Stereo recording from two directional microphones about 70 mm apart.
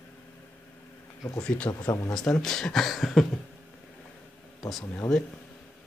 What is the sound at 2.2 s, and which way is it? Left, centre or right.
Speech, centre.